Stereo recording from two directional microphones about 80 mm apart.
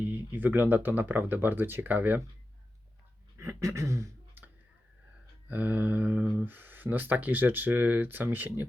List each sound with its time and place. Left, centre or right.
0.0 s speech: right
3.3 s a sound: right
4.4 s clicking: right
5.5 s speech: centre